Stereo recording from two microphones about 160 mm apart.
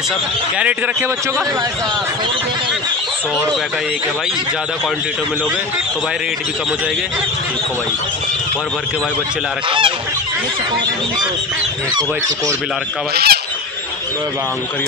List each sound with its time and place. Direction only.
9.7 s goose: 35° right (ahead or behind)
13.1 s speech: 80° right